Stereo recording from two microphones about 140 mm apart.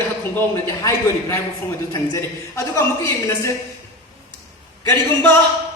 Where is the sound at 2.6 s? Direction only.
20° left (ahead or behind).